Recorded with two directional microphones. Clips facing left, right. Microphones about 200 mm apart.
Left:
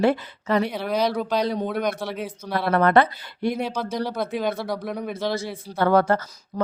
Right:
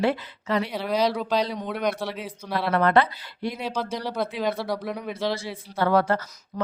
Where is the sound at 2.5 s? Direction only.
50° left (ahead or behind).